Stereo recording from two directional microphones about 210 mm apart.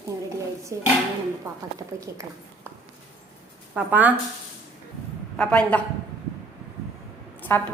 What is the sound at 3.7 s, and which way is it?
Speech, 5° right (ahead or behind).